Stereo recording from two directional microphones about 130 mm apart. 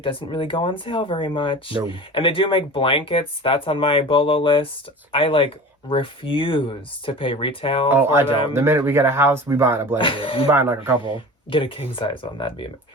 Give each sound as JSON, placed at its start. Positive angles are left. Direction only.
{"t": 0.0, "sound": "speech", "side_deg": 40}
{"t": 7.9, "sound": "speech", "side_deg": -15}
{"t": 10.0, "sound": "speech", "side_deg": 40}
{"t": 10.5, "sound": "speech", "side_deg": -15}
{"t": 11.5, "sound": "speech", "side_deg": 40}